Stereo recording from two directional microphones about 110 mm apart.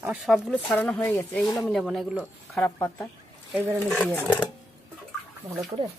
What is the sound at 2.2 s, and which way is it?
Speech, 15° left (ahead or behind).